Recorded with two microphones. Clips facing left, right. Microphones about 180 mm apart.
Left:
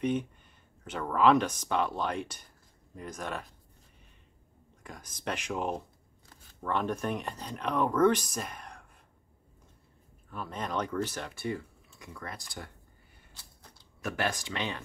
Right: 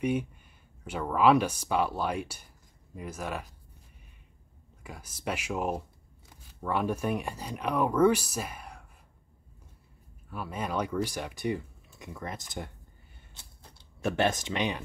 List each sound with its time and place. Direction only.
0.0 s speech: 10° right (ahead or behind)
4.8 s speech: 10° right (ahead or behind)
10.3 s speech: 10° right (ahead or behind)
13.3 s a sound: 25° right (ahead or behind)